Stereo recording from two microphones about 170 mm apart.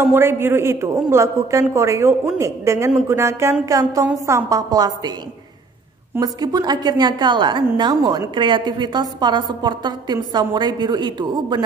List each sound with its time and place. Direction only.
0.0 s a man's voice: 15° right (ahead or behind)
6.1 s a woman's voice: 25° right (ahead or behind)